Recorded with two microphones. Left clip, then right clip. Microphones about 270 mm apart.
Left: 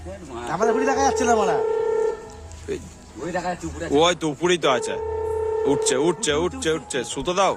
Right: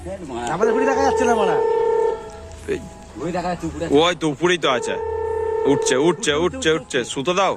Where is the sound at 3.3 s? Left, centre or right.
Right.